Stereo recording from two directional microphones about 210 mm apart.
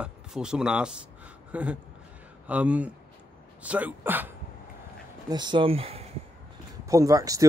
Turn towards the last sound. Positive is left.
turn(degrees=-15)  # may be behind; listen again after turning